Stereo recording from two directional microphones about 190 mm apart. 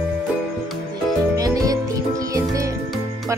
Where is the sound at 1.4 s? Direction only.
20° right (ahead or behind).